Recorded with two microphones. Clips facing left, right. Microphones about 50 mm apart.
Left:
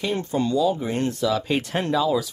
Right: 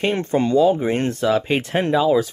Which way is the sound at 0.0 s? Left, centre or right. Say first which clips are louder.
Right 5 dB; right.